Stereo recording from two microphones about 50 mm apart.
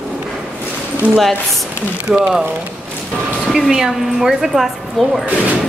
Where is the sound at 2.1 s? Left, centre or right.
Centre.